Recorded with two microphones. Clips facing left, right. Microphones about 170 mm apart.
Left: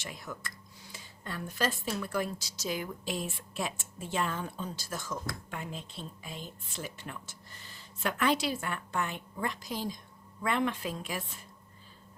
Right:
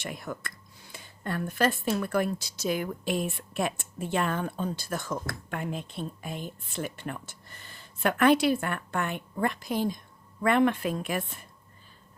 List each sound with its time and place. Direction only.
0.0 s speech: 55° right (ahead or behind)